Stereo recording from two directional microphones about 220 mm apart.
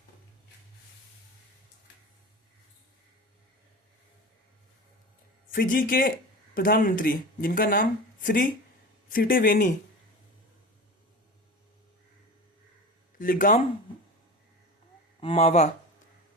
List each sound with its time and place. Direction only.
5.5 s a man's voice: 40° left (ahead or behind)
13.1 s speech: 40° left (ahead or behind)
15.2 s speech: 25° left (ahead or behind)